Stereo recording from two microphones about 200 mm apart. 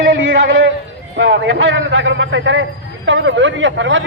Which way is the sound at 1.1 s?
60° right (ahead or behind).